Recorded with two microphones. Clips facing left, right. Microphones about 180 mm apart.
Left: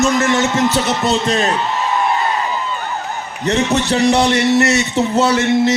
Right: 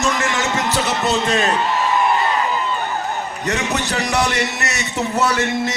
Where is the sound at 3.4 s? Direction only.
25° left (ahead or behind).